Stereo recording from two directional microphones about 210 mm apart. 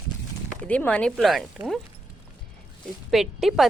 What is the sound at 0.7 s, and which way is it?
Speech, 5° left (ahead or behind).